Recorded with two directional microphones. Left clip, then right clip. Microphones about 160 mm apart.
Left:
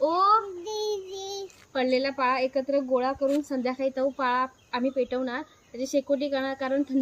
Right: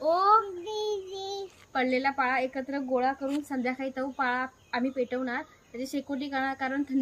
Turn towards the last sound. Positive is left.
turn(degrees=-15)  # may be behind; listen again after turning